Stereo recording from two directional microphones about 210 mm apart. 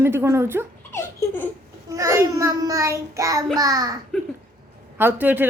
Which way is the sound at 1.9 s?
15° right (ahead or behind).